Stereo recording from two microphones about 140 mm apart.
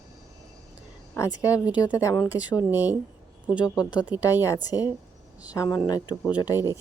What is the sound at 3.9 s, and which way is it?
Speech, 10° right (ahead or behind).